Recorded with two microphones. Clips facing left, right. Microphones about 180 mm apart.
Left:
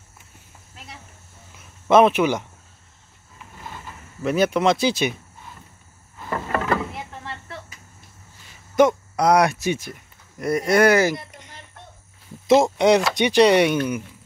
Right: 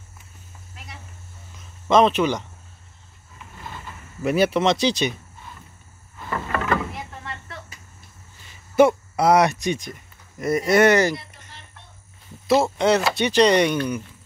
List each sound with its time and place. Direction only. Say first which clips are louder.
1.5 s a sound: left 2 dB; 10° left (ahead or behind)
4.2 s speech: even; 5° right (ahead or behind)
6.3 s rowboat: left 1 dB; 30° left (ahead or behind)
8.7 s speech: right 1 dB; 5° right (ahead or behind)
12.4 s speech: left 3 dB; 15° left (ahead or behind)